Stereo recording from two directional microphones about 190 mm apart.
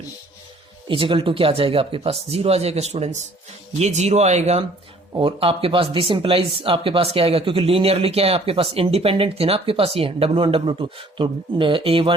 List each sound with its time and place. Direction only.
0.9 s speech: 25° right (ahead or behind)